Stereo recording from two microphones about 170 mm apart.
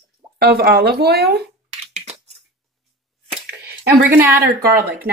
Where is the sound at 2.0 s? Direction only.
40° right (ahead or behind).